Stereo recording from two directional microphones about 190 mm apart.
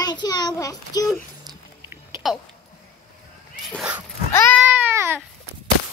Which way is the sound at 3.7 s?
5° right (ahead or behind).